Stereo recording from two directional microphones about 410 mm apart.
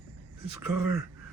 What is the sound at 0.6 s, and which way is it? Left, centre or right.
Speech, right.